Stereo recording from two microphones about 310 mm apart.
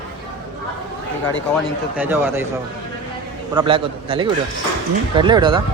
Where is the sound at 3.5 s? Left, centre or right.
Centre.